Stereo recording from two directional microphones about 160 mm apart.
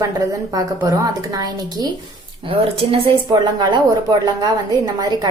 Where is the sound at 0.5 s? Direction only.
25° right (ahead or behind).